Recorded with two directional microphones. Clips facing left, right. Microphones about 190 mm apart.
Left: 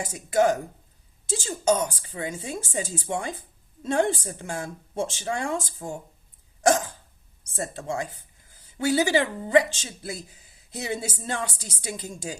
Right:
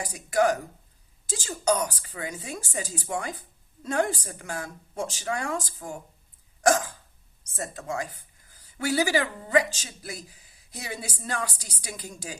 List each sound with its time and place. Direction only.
0.0 s speech: 25° left (ahead or behind)
6.6 s hiccup: 25° left (ahead or behind)
7.5 s speech: 30° left (ahead or behind)